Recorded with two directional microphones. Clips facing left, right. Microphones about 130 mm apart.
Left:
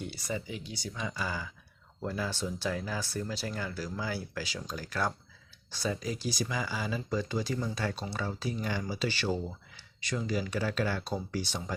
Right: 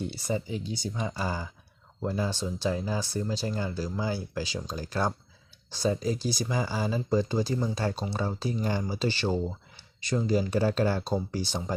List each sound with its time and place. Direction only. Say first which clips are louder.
0.0 s speech: right 5 dB; 30° right (ahead or behind)